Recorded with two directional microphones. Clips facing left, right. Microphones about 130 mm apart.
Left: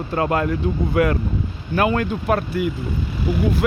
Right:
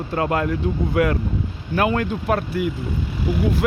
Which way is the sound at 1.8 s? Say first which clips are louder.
Left 1 dB; 50° left (ahead or behind).